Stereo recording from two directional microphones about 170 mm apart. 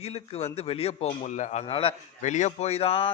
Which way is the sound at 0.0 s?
35° left (ahead or behind).